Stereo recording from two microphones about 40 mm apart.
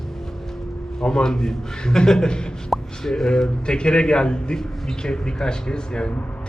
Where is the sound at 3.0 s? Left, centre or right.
Centre.